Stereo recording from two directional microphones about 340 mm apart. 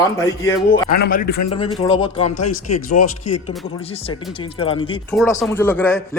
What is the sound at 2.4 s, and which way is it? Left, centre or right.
Speech, left.